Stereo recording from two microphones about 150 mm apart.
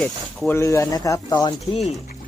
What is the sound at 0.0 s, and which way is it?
Speech, 10° left (ahead or behind).